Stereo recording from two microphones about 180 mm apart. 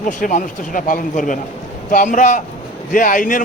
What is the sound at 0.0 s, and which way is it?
A man's voice, 45° left (ahead or behind).